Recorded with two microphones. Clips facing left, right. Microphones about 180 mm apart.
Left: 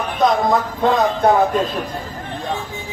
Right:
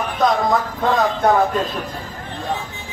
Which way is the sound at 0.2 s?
Centre (ahead or behind).